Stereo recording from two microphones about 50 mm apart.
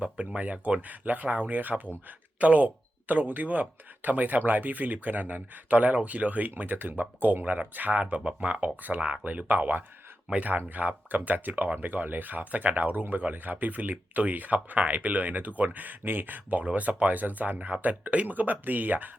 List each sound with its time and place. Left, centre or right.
0.3 s speech: right
8.2 s speech: right